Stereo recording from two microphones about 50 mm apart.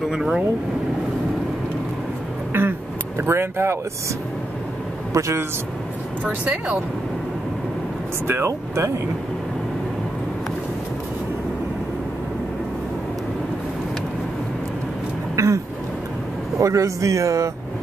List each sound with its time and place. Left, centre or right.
0.1 s speech: centre
2.5 s a sound: right
3.2 s speech: right
5.1 s a man's voice: right
6.2 s speech: right
8.3 s speech: right
15.3 s a sound: right
16.5 s speech: right